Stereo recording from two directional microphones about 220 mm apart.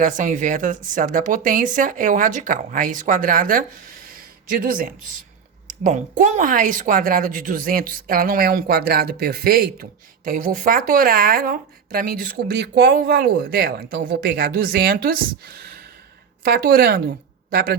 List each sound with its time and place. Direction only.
0.0 s a woman's voice: 35° right (ahead or behind)